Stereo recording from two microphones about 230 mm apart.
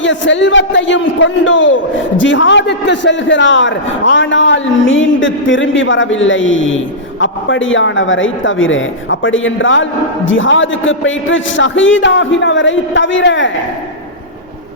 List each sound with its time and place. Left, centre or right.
0.0 s a man's voice: left